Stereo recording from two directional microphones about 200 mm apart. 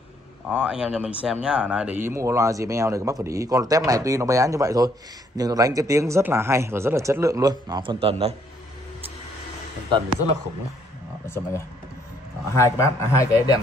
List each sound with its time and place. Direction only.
0.5 s speech: 5° right (ahead or behind); by 8.4 s 30° right (ahead or behind)
11.2 s speech: 10° left (ahead or behind)